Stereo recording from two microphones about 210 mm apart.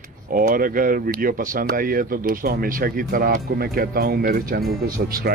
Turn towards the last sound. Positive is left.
turn(degrees=-45)  # may be behind; listen again after turning